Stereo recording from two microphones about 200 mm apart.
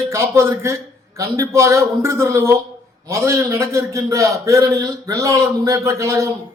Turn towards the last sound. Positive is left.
turn(degrees=-15)  # may be behind; listen again after turning